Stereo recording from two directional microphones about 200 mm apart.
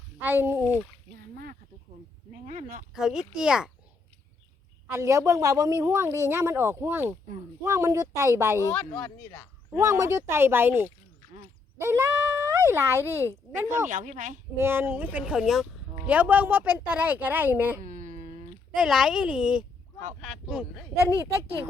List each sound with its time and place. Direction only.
0.2 s speech: 10° right (ahead or behind)
2.5 s speech: 40° right (ahead or behind)
2.9 s a woman's voice: 5° right (ahead or behind)
4.9 s speech: 15° right (ahead or behind)
8.5 s speech: 10° left (ahead or behind)
9.7 s a child's voice: 15° right (ahead or behind)
13.9 s speech: 40° right (ahead or behind)
14.6 s speech: 10° right (ahead or behind)
17.8 s dog: 40° right (ahead or behind)
18.8 s a woman's voice: 5° right (ahead or behind)